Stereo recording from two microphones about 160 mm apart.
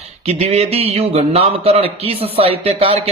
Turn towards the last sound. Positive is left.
turn(degrees=-40)  # may be behind; listen again after turning